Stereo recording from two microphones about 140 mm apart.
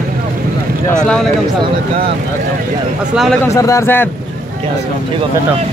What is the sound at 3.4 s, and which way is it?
Speech, 20° left (ahead or behind).